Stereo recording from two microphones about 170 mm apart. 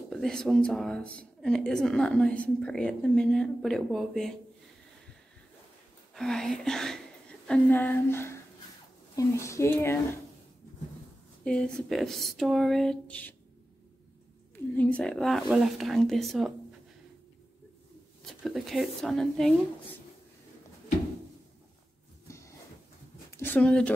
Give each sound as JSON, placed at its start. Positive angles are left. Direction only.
{"t": 0.1, "sound": "a woman's voice", "side_deg": 5}
{"t": 6.1, "sound": "speech", "side_deg": 5}
{"t": 11.4, "sound": "a woman's voice", "side_deg": 5}
{"t": 14.5, "sound": "a woman's voice", "side_deg": 10}
{"t": 18.2, "sound": "a woman's voice", "side_deg": 0}
{"t": 22.3, "sound": "a sound", "side_deg": 15}
{"t": 23.3, "sound": "speech", "side_deg": 10}